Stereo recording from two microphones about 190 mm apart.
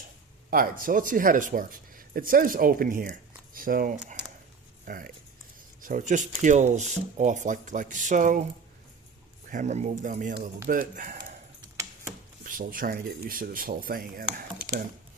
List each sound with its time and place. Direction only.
0.5 s speech: 50° right (ahead or behind)
9.5 s speech: 40° right (ahead or behind)
12.4 s speech: 45° right (ahead or behind)